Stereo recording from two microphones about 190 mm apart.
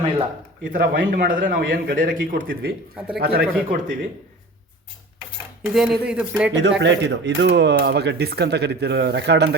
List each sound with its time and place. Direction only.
0.6 s a man's voice: 45° right (ahead or behind)
5.6 s speech: centre (ahead or behind)
6.6 s speech: 65° right (ahead or behind)